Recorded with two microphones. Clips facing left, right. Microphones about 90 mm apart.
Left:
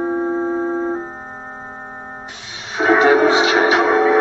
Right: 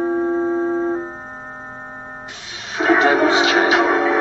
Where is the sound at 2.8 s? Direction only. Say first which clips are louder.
Left 2 dB; centre (ahead or behind).